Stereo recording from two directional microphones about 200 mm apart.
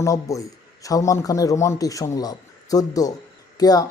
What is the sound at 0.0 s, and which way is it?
Speech, 15° left (ahead or behind).